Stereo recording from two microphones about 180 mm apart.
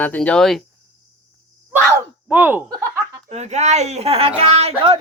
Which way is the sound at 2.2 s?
10° right (ahead or behind).